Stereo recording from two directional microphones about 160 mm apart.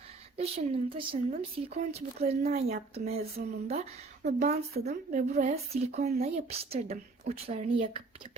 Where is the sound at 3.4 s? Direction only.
60° right (ahead or behind).